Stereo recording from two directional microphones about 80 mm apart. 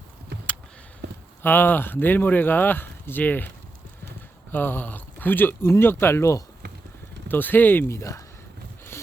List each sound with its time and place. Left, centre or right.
1.4 s speech: left
4.5 s speech: left
7.3 s speech: left